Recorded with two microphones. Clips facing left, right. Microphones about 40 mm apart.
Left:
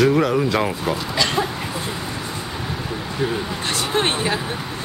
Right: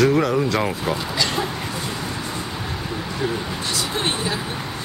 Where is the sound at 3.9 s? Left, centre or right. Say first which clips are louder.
Left 6 dB; left.